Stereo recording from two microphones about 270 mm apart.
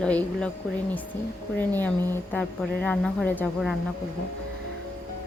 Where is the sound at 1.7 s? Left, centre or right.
Centre.